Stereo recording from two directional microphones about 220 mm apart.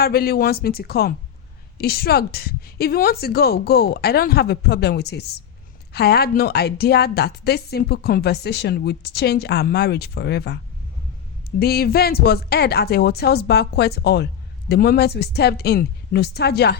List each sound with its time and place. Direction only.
0.0 s a woman's voice: 45° left (ahead or behind)
11.6 s a woman's voice: 45° left (ahead or behind)